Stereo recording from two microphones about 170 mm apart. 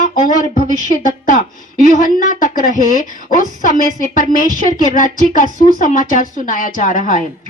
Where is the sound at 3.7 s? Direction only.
50° left (ahead or behind).